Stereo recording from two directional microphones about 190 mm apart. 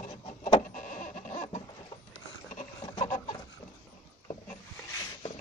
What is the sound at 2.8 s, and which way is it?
Chicken, 25° left (ahead or behind).